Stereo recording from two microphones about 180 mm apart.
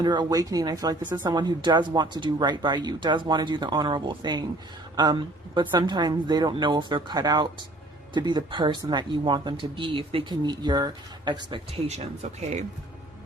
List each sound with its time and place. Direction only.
0.0 s speech: 25° right (ahead or behind)
11.9 s speech: 40° right (ahead or behind)